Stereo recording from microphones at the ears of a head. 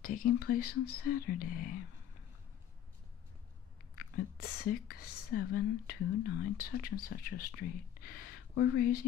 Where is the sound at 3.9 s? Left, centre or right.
Left.